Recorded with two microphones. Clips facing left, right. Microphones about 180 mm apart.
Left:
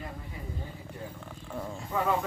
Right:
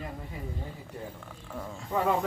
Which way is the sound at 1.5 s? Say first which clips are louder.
Left 2 dB; 10° left (ahead or behind).